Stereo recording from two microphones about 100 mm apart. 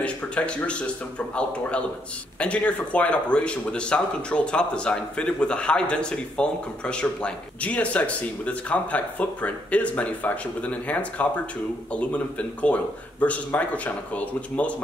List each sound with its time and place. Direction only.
0.0 s speech: 10° left (ahead or behind)